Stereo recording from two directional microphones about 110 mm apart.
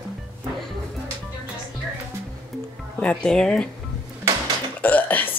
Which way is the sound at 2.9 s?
10° left (ahead or behind).